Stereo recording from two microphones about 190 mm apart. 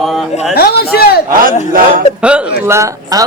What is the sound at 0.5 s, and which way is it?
Speech, 55° left (ahead or behind).